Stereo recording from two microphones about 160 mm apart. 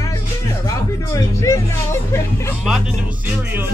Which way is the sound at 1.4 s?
20° left (ahead or behind).